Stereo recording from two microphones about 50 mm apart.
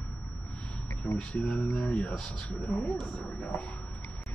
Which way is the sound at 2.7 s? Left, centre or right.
Left.